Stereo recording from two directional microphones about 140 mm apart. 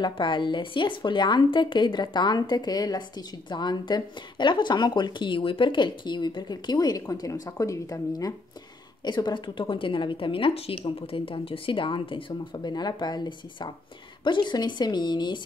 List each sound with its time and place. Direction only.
0.0 s a woman's voice: 35° left (ahead or behind)